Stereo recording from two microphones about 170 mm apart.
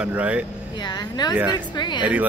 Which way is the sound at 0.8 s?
25° left (ahead or behind).